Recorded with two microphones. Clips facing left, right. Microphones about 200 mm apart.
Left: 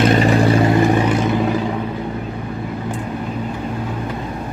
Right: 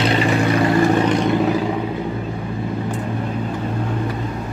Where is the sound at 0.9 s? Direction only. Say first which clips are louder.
Even; 5° left (ahead or behind).